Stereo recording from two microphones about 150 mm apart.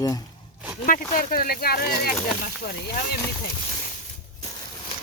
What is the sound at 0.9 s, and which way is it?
Speech, 65° left (ahead or behind).